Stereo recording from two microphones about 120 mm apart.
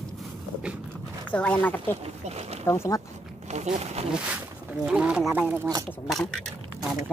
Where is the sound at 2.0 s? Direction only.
60° right (ahead or behind).